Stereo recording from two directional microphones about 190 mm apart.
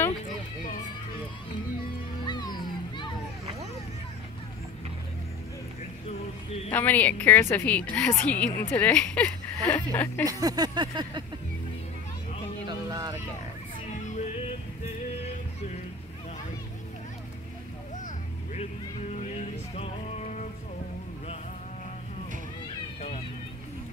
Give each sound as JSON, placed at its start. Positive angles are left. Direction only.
{"t": 2.2, "sound": "music", "side_deg": 20}
{"t": 6.7, "sound": "speech", "side_deg": 10}
{"t": 10.2, "sound": "a sound", "side_deg": -20}
{"t": 12.6, "sound": "a sound", "side_deg": -20}
{"t": 14.0, "sound": "music", "side_deg": 40}
{"t": 17.9, "sound": "vehicle", "side_deg": 40}
{"t": 19.3, "sound": "music", "side_deg": 35}